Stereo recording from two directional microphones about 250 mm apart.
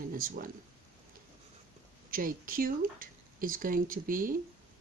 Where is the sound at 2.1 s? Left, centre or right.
Right.